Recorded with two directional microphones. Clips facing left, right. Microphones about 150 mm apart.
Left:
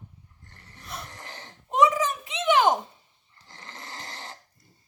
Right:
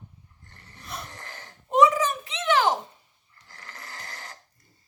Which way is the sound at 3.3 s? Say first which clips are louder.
Left 1 dB; 25° left (ahead or behind).